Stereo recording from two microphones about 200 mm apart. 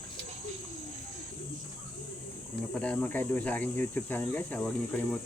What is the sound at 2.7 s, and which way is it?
Speech, 5° left (ahead or behind).